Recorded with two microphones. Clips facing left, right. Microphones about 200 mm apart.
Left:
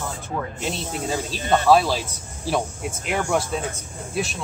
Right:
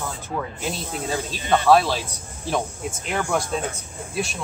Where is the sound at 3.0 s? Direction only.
5° left (ahead or behind).